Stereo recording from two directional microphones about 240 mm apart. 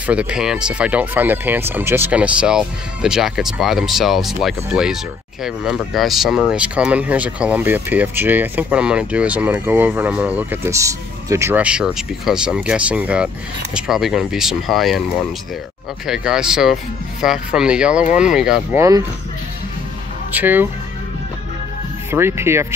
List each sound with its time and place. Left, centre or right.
0.0 s speech: centre
16.1 s speech: centre
18.8 s speech: centre
20.3 s speech: centre
22.1 s speech: centre